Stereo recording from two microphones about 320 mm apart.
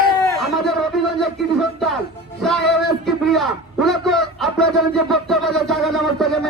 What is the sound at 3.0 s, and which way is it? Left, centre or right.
A man's voice, centre.